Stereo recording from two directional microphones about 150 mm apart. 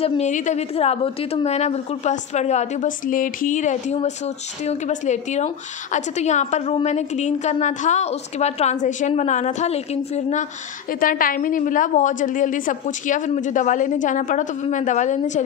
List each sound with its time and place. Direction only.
0.0 s a woman's voice: 50° left (ahead or behind)
11.0 s a woman's voice: 70° left (ahead or behind)